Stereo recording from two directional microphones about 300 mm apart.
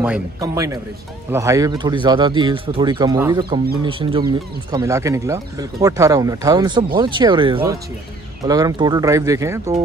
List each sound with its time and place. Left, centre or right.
0.0 s speech: centre